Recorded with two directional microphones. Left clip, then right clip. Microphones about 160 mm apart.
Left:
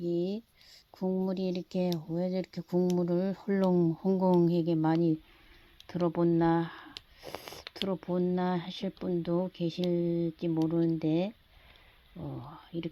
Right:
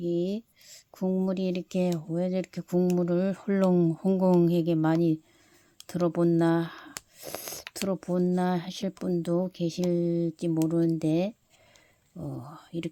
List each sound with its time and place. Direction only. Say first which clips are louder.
0.0 s speech: right 3 dB; 30° right (ahead or behind)